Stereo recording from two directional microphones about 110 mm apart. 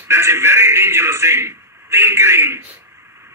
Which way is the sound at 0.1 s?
25° right (ahead or behind).